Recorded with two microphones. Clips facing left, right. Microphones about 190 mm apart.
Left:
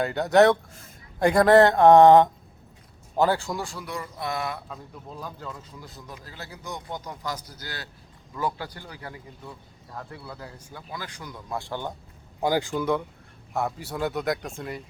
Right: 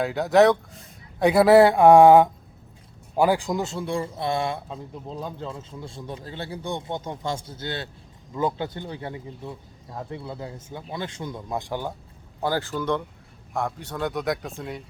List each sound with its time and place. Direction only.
0.0 s a man's voice: centre (ahead or behind)
12.4 s a man's voice: 15° left (ahead or behind)